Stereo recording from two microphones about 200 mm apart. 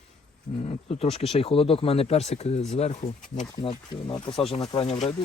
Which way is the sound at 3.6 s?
25° left (ahead or behind).